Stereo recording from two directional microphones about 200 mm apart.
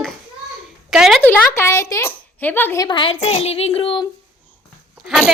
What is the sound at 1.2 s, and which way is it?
Speech, 10° left (ahead or behind).